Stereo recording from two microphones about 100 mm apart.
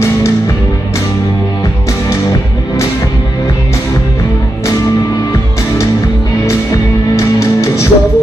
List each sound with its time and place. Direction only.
6.4 s music: 30° left (ahead or behind)